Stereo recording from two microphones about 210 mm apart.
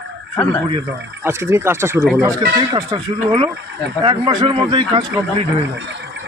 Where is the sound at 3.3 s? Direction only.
15° right (ahead or behind).